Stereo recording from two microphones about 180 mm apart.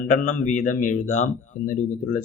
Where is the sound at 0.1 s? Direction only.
45° left (ahead or behind).